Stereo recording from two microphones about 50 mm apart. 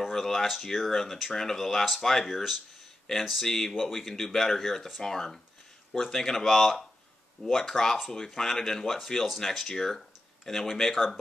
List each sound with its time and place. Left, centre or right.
0.0 s speech: centre
3.7 s speech: centre